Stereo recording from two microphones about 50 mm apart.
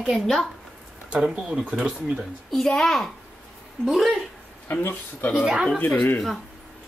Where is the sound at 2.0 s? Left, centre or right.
Right.